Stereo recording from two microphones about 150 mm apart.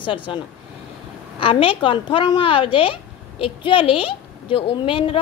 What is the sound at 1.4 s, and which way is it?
A woman's voice, 35° left (ahead or behind).